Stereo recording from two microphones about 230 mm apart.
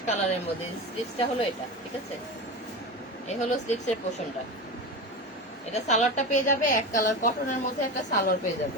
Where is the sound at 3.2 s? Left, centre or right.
Left.